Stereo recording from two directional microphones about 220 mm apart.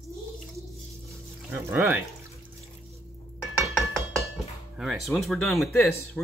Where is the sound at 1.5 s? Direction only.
5° right (ahead or behind).